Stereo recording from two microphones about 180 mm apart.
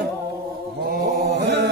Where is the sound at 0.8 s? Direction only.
70° right (ahead or behind).